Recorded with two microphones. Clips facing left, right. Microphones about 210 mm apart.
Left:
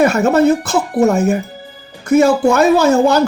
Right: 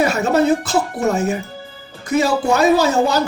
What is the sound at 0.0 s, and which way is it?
A man's voice, 50° left (ahead or behind).